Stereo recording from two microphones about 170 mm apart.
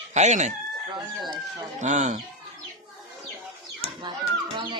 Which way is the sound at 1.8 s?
45° right (ahead or behind).